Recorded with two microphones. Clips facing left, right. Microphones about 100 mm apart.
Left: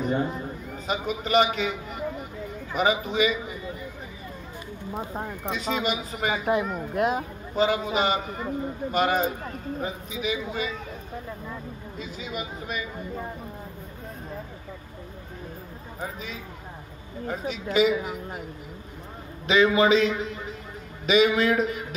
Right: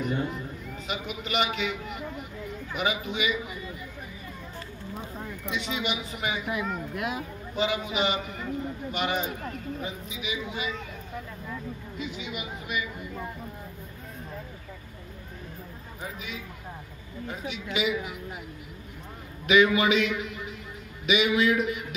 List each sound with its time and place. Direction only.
0.0 s a man's voice: 35° left (ahead or behind)
5.1 s speech: 55° left (ahead or behind)
5.5 s a man's voice: 40° left (ahead or behind)
12.0 s a man's voice: 40° left (ahead or behind)
16.0 s a man's voice: 35° left (ahead or behind)
19.4 s a man's voice: 30° left (ahead or behind)